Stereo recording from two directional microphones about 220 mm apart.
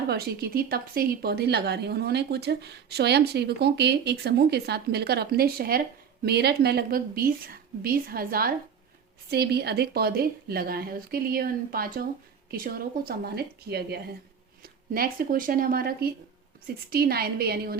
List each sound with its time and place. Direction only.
0.1 s a woman's voice: 45° right (ahead or behind)